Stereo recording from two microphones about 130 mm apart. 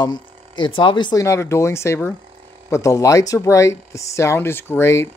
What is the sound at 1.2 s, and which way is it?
Speech, 20° left (ahead or behind).